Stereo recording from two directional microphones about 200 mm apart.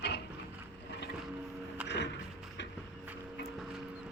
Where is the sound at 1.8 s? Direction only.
60° left (ahead or behind).